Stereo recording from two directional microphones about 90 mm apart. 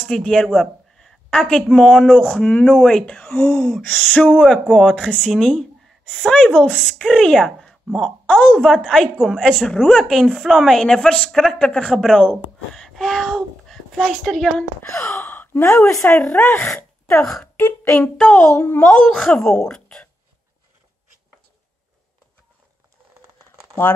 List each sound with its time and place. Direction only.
0.1 s a woman's voice: 5° left (ahead or behind)
2.0 s speech: 10° right (ahead or behind)
2.4 s a woman's voice: 15° left (ahead or behind)
8.3 s speech: 15° left (ahead or behind)
8.5 s a woman's voice: centre (ahead or behind)
14.8 s speech: 25° left (ahead or behind)
15.2 s gasp: 20° left (ahead or behind)
16.1 s speech: 15° left (ahead or behind)
17.1 s speech: 10° left (ahead or behind)
17.6 s speech: 25° left (ahead or behind)
18.1 s a woman's voice: 10° left (ahead or behind)